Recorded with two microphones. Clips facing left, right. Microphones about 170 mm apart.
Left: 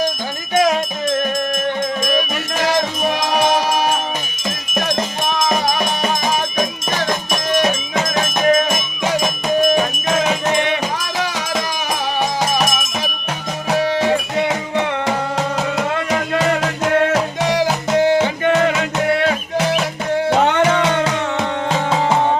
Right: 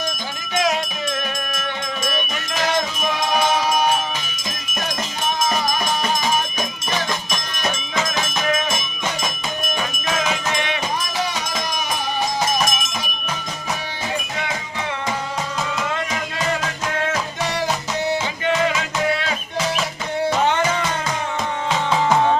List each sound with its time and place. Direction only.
0.5 s music: 45° left (ahead or behind)
2.1 s music: 40° left (ahead or behind)
7.9 s music: 50° left (ahead or behind)
10.4 s music: 55° left (ahead or behind)
13.7 s music: 90° left
18.4 s music: 60° left (ahead or behind)
21.7 s music: 45° left (ahead or behind)